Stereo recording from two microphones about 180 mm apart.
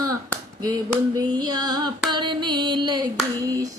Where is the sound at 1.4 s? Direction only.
20° right (ahead or behind).